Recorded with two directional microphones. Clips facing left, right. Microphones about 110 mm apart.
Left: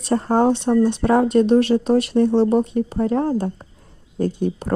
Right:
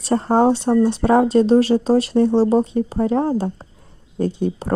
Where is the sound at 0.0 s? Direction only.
25° right (ahead or behind).